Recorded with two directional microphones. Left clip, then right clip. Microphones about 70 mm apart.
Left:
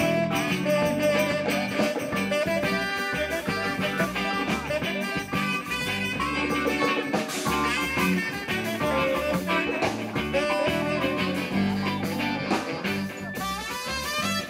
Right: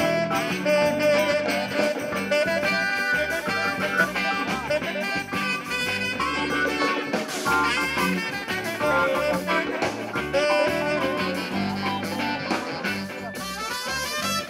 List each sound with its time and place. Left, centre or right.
0.0 s music: right
6.5 s music: centre